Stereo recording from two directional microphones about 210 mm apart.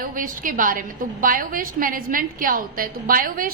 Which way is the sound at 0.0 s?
40° right (ahead or behind).